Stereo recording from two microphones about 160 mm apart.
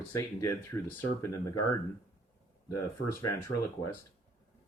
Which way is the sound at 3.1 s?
20° left (ahead or behind).